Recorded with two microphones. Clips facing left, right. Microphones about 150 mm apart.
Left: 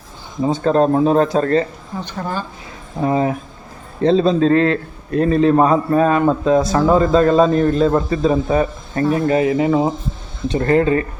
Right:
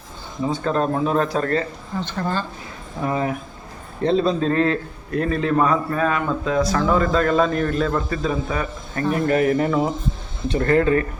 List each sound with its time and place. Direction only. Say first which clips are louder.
0.4 s speech: left 6 dB; 30° left (ahead or behind)
2.0 s a woman's voice: even; 10° left (ahead or behind)
3.0 s a man's voice: left 6 dB; 30° left (ahead or behind)